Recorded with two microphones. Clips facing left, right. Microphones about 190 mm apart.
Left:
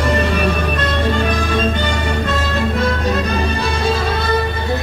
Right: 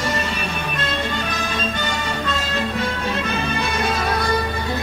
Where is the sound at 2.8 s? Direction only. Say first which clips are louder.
Left 6 dB; 40° left (ahead or behind).